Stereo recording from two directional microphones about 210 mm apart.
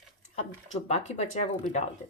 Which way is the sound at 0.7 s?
30° left (ahead or behind).